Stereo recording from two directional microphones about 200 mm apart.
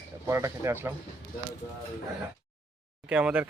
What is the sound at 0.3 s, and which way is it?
Speech, 15° right (ahead or behind).